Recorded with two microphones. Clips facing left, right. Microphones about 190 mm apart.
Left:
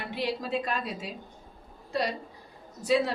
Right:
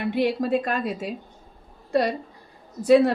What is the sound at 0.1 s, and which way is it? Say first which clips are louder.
A woman's voice: right 8 dB; 55° right (ahead or behind).